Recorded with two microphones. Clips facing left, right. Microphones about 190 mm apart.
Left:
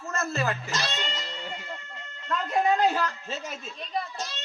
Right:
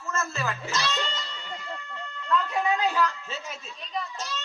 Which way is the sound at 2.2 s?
35° left (ahead or behind).